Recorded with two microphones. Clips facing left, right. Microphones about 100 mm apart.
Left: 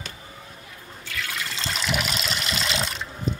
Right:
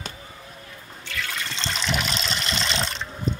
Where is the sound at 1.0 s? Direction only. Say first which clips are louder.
Right 1 dB; centre (ahead or behind).